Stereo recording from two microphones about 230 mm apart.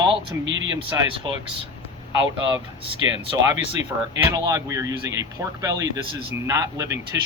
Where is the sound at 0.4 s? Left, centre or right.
Right.